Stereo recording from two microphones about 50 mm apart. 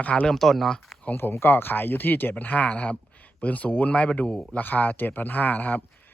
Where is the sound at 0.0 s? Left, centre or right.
Left.